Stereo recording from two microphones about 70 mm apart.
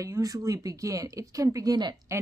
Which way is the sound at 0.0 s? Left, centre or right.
Right.